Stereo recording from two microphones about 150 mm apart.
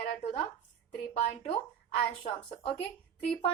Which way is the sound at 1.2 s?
40° left (ahead or behind).